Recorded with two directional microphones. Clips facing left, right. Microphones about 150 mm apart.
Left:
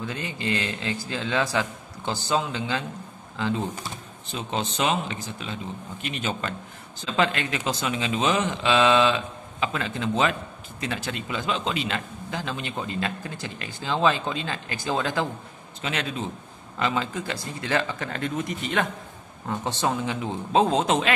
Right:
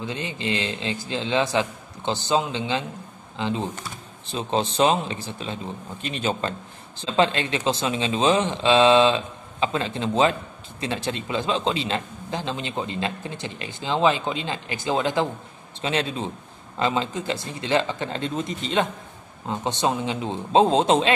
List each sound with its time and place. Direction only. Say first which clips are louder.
0.0 s a man's voice: right 2 dB; 20° right (ahead or behind)
4.3 s a man's voice: right 5 dB; 30° right (ahead or behind)